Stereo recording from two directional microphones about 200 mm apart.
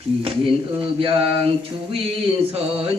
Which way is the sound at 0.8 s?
25° right (ahead or behind).